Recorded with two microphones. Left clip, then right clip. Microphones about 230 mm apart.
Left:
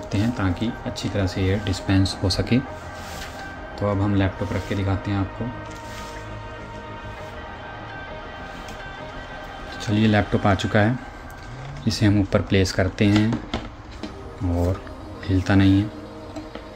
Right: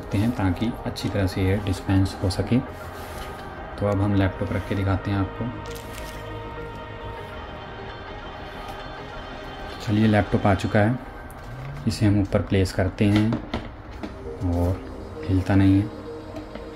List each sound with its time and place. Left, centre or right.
0.1 s speech: centre
3.8 s speech: centre
9.9 s speech: centre
11.9 s speech: centre
15.2 s speech: centre